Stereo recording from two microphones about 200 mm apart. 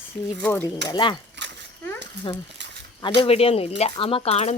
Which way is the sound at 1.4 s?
60° right (ahead or behind).